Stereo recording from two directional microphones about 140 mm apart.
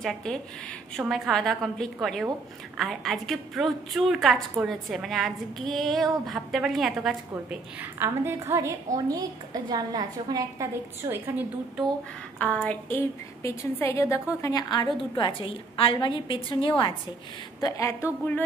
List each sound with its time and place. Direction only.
0.0 s a woman's voice: 5° left (ahead or behind)
8.0 s a woman's voice: 15° right (ahead or behind)
11.1 s a woman's voice: 15° right (ahead or behind)
12.4 s a woman's voice: 10° left (ahead or behind); by 16.9 s 35° left (ahead or behind)
17.6 s a woman's voice: 25° left (ahead or behind)